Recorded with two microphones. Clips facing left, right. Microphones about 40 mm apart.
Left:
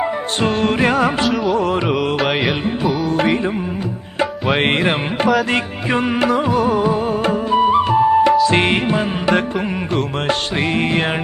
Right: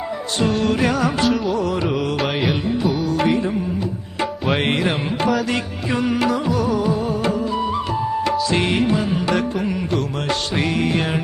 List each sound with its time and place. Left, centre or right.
0.3 s music: left
2.1 s music: centre
3.1 s music: left
4.6 s music: left